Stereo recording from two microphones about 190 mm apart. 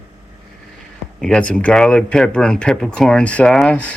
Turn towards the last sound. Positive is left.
turn(degrees=5)  # may be behind; listen again after turning